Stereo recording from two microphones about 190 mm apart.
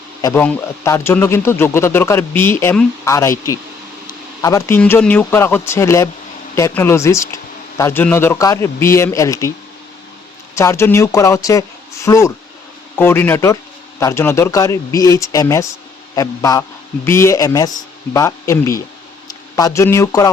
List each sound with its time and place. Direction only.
0.2 s speech: 20° left (ahead or behind)
10.5 s a man's voice: 15° left (ahead or behind)